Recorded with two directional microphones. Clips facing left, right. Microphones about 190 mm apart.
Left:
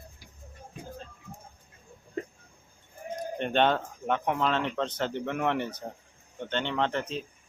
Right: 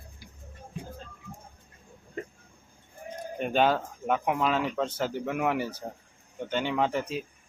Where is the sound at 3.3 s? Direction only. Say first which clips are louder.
Right 1 dB; 5° right (ahead or behind).